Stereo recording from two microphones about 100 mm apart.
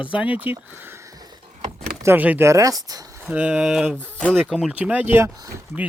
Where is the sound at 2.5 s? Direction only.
35° right (ahead or behind).